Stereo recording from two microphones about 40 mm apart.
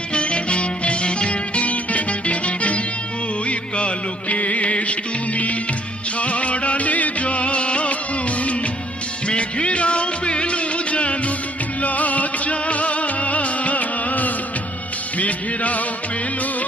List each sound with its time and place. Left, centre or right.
0.1 s music: left